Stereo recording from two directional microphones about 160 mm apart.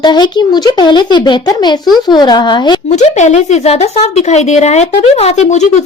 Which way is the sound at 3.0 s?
45° left (ahead or behind).